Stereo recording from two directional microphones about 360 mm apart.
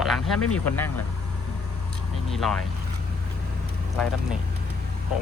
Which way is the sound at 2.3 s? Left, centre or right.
Centre.